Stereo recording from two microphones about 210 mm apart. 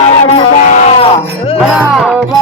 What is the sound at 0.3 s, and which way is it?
Sheep, 35° left (ahead or behind).